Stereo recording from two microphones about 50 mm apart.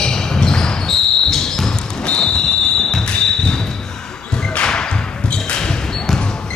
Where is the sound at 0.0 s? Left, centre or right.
Centre.